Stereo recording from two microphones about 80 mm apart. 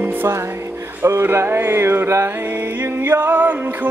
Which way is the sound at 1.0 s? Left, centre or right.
Right.